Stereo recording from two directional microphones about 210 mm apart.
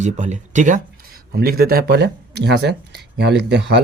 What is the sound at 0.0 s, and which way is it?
Speech, 35° right (ahead or behind).